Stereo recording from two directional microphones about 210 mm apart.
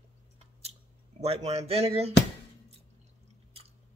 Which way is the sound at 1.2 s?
30° right (ahead or behind).